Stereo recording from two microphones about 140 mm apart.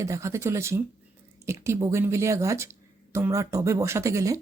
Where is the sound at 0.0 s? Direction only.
20° right (ahead or behind).